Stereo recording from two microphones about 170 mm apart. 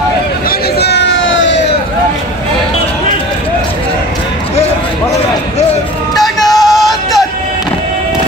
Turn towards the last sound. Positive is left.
turn(degrees=0)  # may be behind; listen again after turning